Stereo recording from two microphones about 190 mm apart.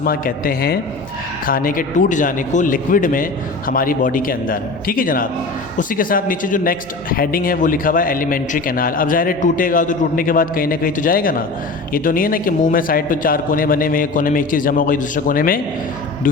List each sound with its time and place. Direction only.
0.0 s a man's voice: 50° left (ahead or behind)